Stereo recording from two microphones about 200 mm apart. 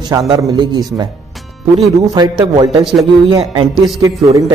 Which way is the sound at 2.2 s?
20° right (ahead or behind).